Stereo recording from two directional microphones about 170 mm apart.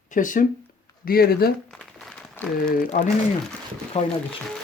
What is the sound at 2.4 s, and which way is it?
Speech, 10° left (ahead or behind).